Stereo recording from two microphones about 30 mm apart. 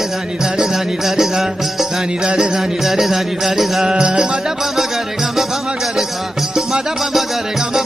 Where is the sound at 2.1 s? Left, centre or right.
Right.